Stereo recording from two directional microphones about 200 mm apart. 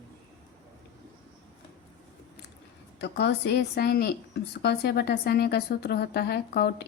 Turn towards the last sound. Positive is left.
turn(degrees=55)  # may be behind; listen again after turning